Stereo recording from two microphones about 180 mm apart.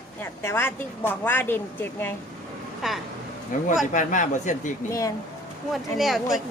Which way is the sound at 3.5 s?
50° left (ahead or behind).